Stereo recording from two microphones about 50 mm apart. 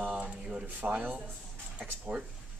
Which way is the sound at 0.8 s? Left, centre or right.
Right.